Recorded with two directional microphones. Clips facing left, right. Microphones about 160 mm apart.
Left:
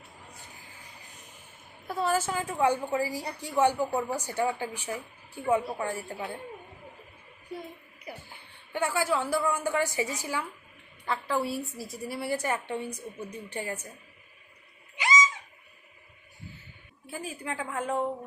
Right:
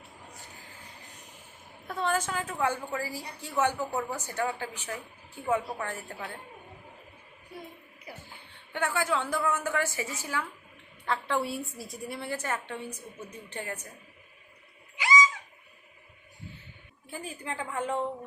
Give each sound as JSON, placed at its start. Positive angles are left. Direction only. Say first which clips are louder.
{"t": 1.9, "sound": "a woman's voice", "louder": "left 2 dB", "side_deg": 5}
{"t": 8.7, "sound": "a woman's voice", "louder": "left 1 dB", "side_deg": 10}
{"t": 11.0, "sound": "a woman's voice", "louder": "even", "side_deg": 0}
{"t": 14.9, "sound": "a sound", "louder": "right 1 dB", "side_deg": 20}
{"t": 17.1, "sound": "a woman's voice", "louder": "left 2 dB", "side_deg": 5}